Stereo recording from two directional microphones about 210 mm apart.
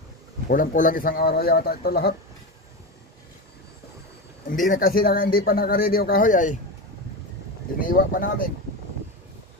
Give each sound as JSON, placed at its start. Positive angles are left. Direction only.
{"t": 0.5, "sound": "a man's voice", "side_deg": 40}
{"t": 4.5, "sound": "a man's voice", "side_deg": 40}
{"t": 7.8, "sound": "a man's voice", "side_deg": 40}